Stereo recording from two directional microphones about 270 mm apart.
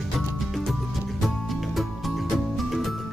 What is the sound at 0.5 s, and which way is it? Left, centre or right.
Music, centre.